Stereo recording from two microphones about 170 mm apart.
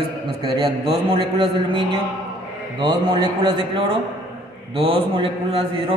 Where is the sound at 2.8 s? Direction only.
25° right (ahead or behind).